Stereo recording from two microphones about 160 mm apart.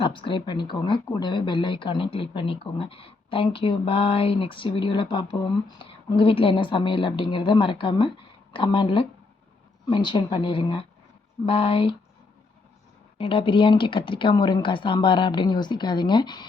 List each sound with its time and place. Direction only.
0.0 s speech: 30° left (ahead or behind)
13.1 s speech: 35° left (ahead or behind)